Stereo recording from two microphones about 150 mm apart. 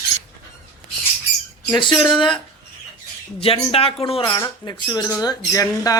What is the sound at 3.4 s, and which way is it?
Speech, 40° left (ahead or behind).